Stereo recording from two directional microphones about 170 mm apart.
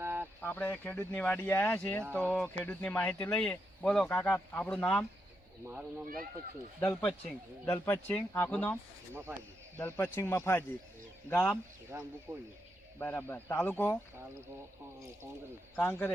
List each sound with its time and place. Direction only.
0.0 s a sound: 10° right (ahead or behind)
0.4 s speech: 10° left (ahead or behind)
6.7 s speech: 10° left (ahead or behind)
11.9 s speech: 15° right (ahead or behind)
13.0 s speech: 10° left (ahead or behind)
15.7 s speech: 10° left (ahead or behind)